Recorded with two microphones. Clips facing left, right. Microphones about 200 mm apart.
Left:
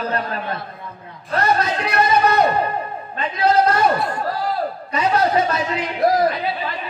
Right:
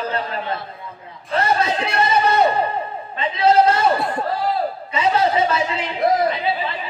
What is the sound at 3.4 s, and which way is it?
A man's voice, 25° right (ahead or behind).